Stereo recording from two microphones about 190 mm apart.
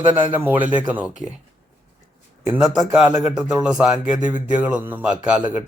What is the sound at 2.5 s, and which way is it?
A man's voice, 5° right (ahead or behind).